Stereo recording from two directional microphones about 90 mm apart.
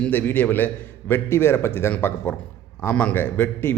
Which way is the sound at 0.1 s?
20° left (ahead or behind).